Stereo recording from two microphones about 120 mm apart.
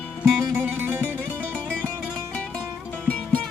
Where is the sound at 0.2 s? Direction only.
5° right (ahead or behind).